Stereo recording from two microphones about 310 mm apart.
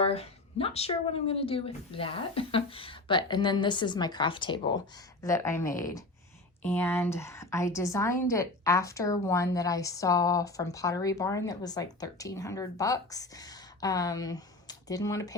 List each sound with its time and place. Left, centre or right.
0.0 s a woman's voice: centre